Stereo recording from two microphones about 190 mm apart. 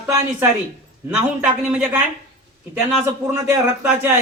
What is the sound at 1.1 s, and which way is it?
A man's voice, 5° right (ahead or behind).